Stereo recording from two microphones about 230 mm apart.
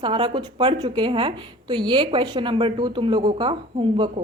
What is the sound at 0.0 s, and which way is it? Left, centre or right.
A woman's voice, right.